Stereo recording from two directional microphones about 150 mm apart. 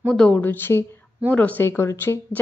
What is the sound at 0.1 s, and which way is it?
A woman's voice, 5° left (ahead or behind).